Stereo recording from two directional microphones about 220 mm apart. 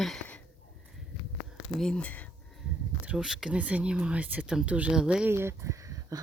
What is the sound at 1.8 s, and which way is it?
Speech, 5° left (ahead or behind).